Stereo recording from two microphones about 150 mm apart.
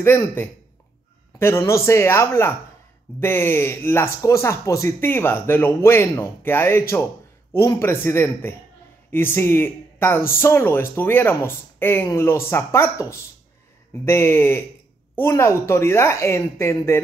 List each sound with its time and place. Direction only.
0.0 s speech: 15° left (ahead or behind)
14.0 s speech: 15° left (ahead or behind)